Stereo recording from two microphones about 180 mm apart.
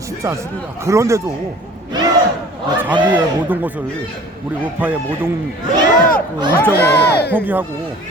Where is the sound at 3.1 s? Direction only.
10° right (ahead or behind).